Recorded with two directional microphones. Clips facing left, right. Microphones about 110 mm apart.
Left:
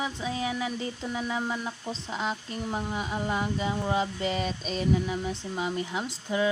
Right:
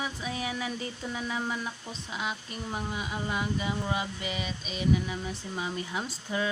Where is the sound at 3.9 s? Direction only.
30° left (ahead or behind).